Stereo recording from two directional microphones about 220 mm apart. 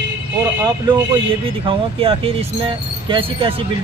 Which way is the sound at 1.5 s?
25° right (ahead or behind).